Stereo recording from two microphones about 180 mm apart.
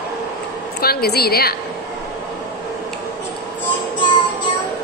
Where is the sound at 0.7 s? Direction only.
60° left (ahead or behind).